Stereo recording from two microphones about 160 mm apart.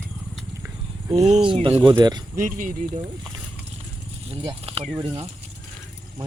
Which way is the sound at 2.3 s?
55° right (ahead or behind).